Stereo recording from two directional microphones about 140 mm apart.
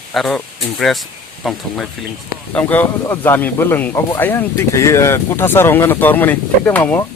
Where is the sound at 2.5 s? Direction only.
10° left (ahead or behind).